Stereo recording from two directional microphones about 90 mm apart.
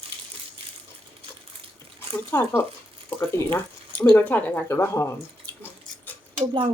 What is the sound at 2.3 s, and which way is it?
Speech, 25° left (ahead or behind).